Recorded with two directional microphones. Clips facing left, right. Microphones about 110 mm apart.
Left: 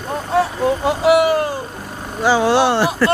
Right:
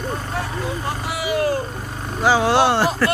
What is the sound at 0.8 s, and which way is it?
Vehicle, 90° left.